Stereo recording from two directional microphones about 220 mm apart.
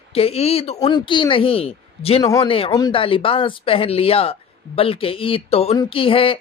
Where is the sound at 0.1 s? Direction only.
25° left (ahead or behind).